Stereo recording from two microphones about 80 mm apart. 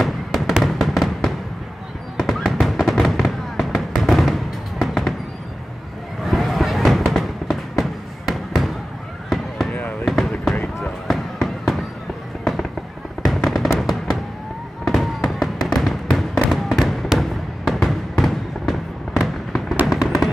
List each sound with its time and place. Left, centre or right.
0.0 s fireworks: centre
6.2 s fireworks: centre
9.7 s fireworks: centre
10.0 s basketball bounce: centre
10.8 s fireworks: centre
13.2 s fireworks: centre
15.7 s music: centre
16.4 s fireworks: centre